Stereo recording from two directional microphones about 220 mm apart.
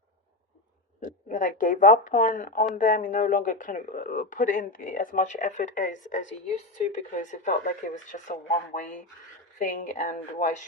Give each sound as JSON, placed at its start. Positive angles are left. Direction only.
{"t": 1.0, "sound": "speech", "side_deg": 35}